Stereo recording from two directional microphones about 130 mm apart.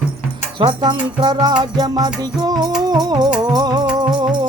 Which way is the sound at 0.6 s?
35° right (ahead or behind).